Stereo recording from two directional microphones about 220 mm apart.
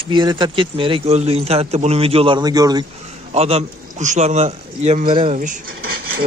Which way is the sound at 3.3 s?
30° right (ahead or behind).